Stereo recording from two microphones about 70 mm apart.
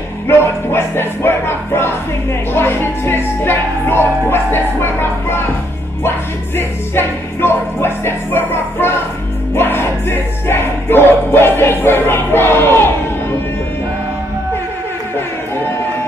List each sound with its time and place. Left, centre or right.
0.3 s music: left